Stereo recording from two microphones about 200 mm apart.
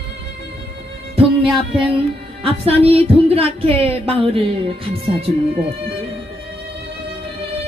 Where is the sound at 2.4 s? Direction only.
30° right (ahead or behind).